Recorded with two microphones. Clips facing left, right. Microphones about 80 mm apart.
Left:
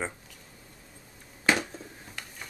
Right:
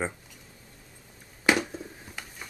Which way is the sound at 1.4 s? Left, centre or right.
Centre.